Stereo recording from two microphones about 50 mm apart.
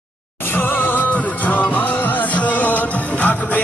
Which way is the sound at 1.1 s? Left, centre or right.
Left.